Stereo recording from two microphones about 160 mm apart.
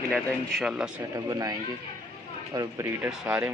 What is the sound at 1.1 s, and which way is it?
Speech, 25° right (ahead or behind).